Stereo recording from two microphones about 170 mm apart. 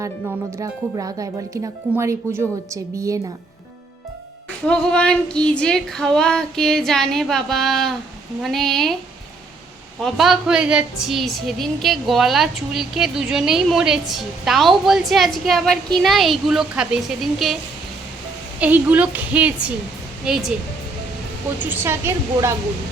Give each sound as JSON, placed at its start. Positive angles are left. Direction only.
{"t": 0.6, "sound": "speech", "side_deg": -20}
{"t": 4.6, "sound": "a woman's voice", "side_deg": 5}
{"t": 10.0, "sound": "a woman's voice", "side_deg": 0}
{"t": 18.6, "sound": "a woman's voice", "side_deg": -10}
{"t": 21.6, "sound": "a woman's voice", "side_deg": -15}